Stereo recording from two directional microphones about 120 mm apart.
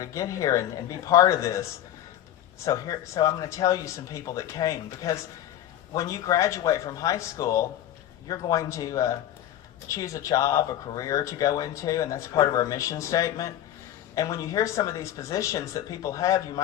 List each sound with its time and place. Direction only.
0.0 s speech: 25° left (ahead or behind)
2.6 s speech: 30° left (ahead or behind)